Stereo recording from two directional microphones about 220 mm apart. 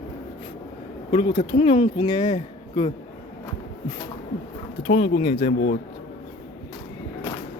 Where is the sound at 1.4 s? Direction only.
25° left (ahead or behind).